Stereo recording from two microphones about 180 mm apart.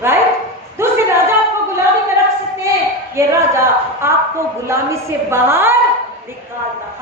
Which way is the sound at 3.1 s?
15° right (ahead or behind).